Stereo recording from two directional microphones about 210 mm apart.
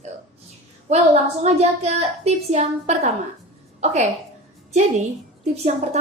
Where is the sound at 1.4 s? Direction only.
30° right (ahead or behind).